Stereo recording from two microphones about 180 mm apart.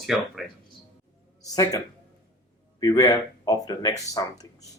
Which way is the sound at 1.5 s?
20° left (ahead or behind).